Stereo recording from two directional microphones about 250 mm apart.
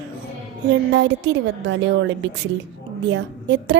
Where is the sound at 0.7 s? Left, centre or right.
Right.